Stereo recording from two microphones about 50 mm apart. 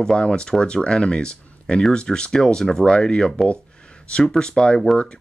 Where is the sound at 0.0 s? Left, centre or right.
Centre.